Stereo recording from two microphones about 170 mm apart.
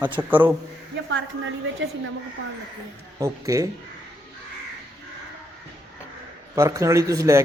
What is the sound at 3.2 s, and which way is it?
Speech, 20° right (ahead or behind).